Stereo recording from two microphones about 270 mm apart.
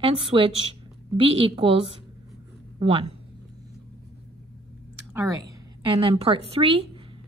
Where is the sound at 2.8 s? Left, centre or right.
Centre.